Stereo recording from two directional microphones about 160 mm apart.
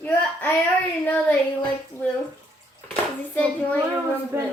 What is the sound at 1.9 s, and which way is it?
Speech, 15° left (ahead or behind).